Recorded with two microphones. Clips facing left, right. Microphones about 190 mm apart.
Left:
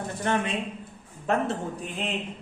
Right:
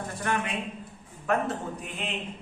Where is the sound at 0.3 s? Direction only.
25° left (ahead or behind).